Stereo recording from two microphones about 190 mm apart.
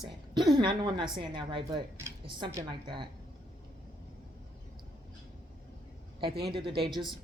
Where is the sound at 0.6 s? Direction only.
25° right (ahead or behind).